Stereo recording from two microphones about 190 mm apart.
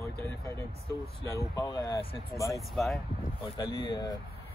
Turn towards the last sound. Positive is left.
turn(degrees=25)  # may be behind; listen again after turning